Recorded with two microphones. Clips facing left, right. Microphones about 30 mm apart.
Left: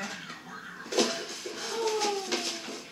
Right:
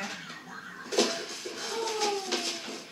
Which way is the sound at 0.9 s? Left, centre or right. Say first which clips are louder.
Even; centre.